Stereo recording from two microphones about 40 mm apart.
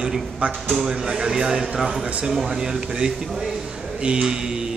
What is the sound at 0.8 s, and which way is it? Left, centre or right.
Speech, centre.